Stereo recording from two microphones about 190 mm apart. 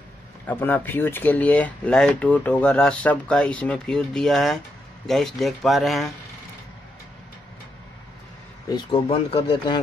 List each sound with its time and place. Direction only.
0.5 s speech: 10° left (ahead or behind)
8.6 s speech: 25° left (ahead or behind)